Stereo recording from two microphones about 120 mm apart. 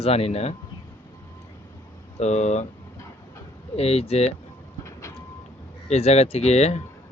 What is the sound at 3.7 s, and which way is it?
Speech, 60° left (ahead or behind).